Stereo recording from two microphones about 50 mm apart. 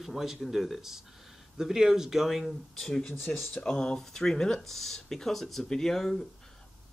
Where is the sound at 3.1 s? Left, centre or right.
Left.